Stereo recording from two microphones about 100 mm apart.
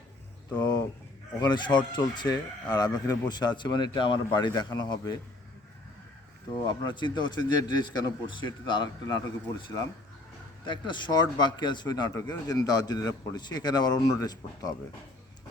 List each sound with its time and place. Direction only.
1.4 s a man's voice: 50° left (ahead or behind)
6.7 s a man's voice: 50° left (ahead or behind)